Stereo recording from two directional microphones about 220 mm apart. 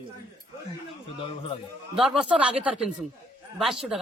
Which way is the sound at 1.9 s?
Centre (ahead or behind).